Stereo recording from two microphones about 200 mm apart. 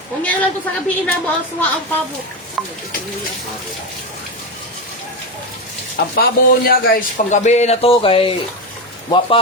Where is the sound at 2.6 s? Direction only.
Centre (ahead or behind).